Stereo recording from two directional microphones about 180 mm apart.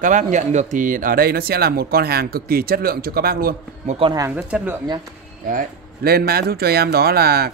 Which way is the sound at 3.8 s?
35° right (ahead or behind).